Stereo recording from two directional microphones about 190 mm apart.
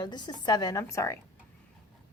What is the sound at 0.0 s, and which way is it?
A woman's voice, 25° left (ahead or behind).